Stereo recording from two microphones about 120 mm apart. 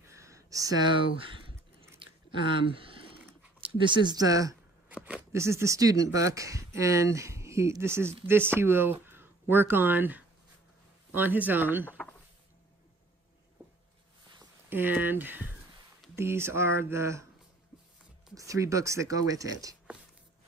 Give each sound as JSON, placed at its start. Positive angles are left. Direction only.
{"t": 0.1, "sound": "a sound", "side_deg": -25}
{"t": 2.0, "sound": "chewing", "side_deg": -45}
{"t": 3.6, "sound": "speech", "side_deg": -40}
{"t": 4.9, "sound": "a sound", "side_deg": -10}
{"t": 5.3, "sound": "speech", "side_deg": -25}
{"t": 14.7, "sound": "speech", "side_deg": -15}
{"t": 18.3, "sound": "speech", "side_deg": -25}